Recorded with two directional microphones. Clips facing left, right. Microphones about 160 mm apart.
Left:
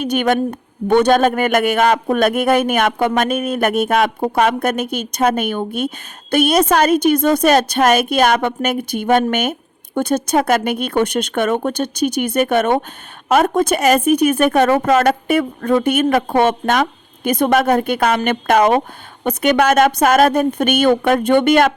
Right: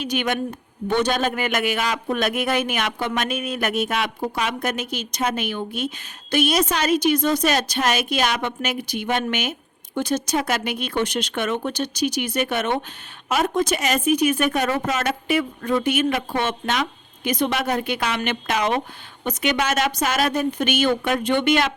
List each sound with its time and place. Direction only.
0.0 s a woman's voice: 55° left (ahead or behind)